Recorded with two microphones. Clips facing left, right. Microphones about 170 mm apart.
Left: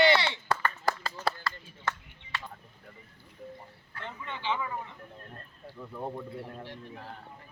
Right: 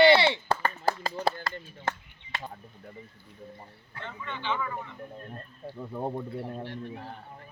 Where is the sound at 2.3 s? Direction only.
40° right (ahead or behind).